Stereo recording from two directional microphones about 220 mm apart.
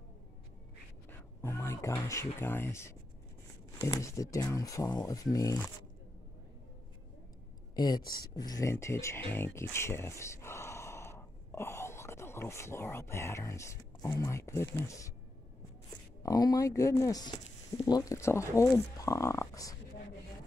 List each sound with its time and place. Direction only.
1.4 s speech: 10° left (ahead or behind)
7.7 s speech: 20° left (ahead or behind)
16.2 s speech: 15° left (ahead or behind)